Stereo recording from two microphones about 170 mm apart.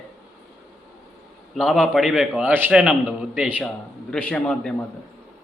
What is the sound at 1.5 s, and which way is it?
A man's voice, centre (ahead or behind).